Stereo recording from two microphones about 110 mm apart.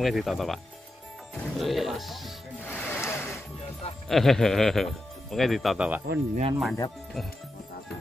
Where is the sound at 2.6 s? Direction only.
15° left (ahead or behind).